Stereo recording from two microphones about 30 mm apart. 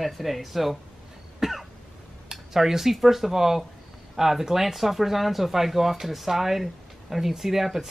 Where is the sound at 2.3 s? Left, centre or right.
Centre.